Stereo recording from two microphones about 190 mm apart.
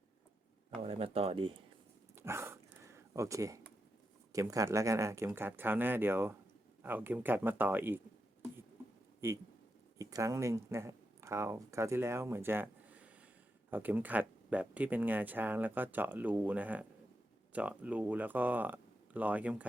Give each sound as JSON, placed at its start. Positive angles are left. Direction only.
{"t": 0.8, "sound": "speech", "side_deg": -30}
{"t": 2.1, "sound": "dog", "side_deg": -15}
{"t": 4.3, "sound": "speech", "side_deg": -15}
{"t": 9.2, "sound": "speech", "side_deg": -15}